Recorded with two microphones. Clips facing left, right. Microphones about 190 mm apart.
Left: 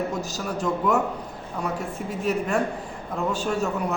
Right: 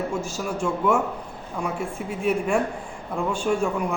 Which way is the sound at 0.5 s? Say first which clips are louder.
Right 1 dB; 40° left (ahead or behind).